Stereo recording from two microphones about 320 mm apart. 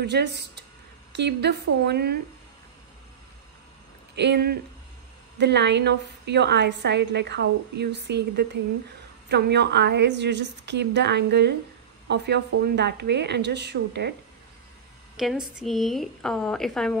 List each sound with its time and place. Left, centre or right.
0.0 s a woman's voice: right
4.1 s a woman's voice: right
15.1 s a woman's voice: centre